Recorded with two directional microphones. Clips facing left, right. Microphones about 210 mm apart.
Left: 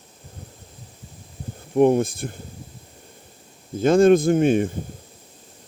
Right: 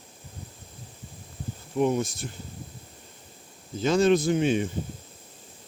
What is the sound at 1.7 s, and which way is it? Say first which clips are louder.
Speech: left 8 dB; 55° left (ahead or behind).